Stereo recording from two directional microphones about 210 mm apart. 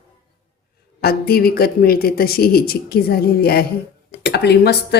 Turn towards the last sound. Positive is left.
turn(degrees=50)  # may be behind; listen again after turning